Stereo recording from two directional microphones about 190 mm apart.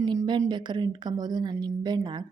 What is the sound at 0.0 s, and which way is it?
A woman's voice, 20° right (ahead or behind).